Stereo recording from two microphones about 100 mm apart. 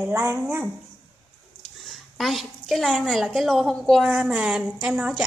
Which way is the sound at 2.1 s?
Centre (ahead or behind).